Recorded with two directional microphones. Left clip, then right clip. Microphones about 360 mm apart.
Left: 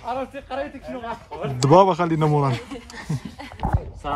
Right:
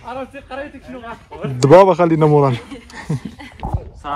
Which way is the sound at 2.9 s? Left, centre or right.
Centre.